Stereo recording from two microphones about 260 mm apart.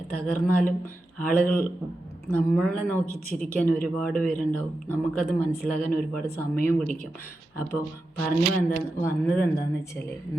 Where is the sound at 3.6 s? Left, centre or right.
Left.